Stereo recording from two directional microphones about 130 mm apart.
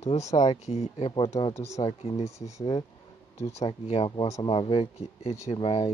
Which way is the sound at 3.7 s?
45° left (ahead or behind).